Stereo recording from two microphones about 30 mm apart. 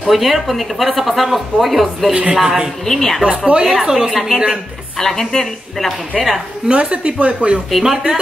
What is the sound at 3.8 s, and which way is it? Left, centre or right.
Speech, centre.